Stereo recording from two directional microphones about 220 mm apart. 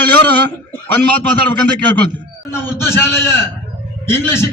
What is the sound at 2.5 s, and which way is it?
A man's voice, 10° left (ahead or behind).